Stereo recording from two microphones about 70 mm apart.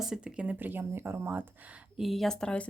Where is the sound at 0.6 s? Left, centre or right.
Right.